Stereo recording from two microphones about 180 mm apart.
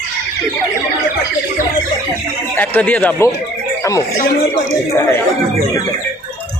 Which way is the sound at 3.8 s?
20° left (ahead or behind).